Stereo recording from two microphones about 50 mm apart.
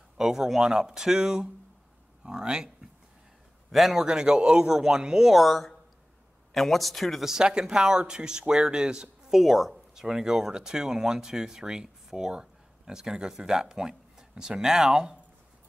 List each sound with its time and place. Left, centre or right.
0.2 s speech: centre
3.7 s speech: centre
4.0 s speech: centre
5.4 s speech: centre
7.2 s speech: centre
9.4 s speech: centre